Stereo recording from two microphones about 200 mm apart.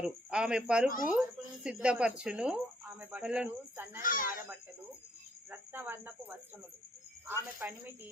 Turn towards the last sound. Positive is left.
turn(degrees=-10)  # may be behind; listen again after turning